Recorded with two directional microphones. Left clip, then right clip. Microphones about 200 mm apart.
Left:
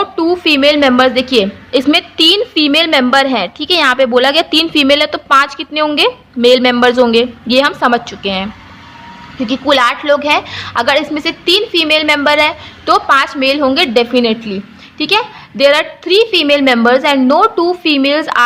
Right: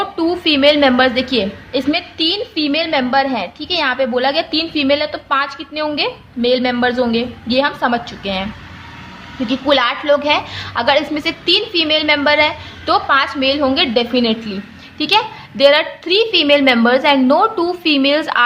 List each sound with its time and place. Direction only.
0.0 s a woman's voice: 25° left (ahead or behind)
9.5 s a woman's voice: 25° left (ahead or behind)